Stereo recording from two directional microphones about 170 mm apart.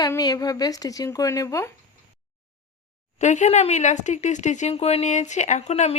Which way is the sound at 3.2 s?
45° left (ahead or behind).